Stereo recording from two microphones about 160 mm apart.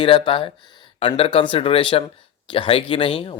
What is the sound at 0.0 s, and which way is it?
Speech, 35° left (ahead or behind).